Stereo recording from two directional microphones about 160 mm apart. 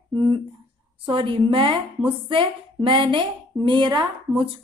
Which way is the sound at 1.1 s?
35° right (ahead or behind).